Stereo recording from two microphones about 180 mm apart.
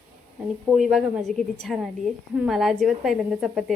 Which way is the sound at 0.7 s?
Centre (ahead or behind).